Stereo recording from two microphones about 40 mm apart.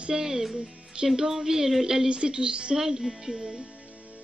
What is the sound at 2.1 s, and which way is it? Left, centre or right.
Speech, right.